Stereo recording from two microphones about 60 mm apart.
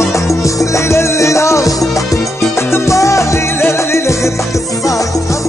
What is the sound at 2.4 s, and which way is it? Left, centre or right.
Music, left.